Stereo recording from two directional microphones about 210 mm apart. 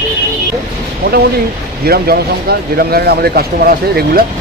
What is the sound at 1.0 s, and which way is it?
Speech, 50° right (ahead or behind).